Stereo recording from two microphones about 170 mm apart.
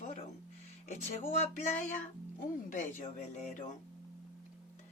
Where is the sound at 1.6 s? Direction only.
45° left (ahead or behind).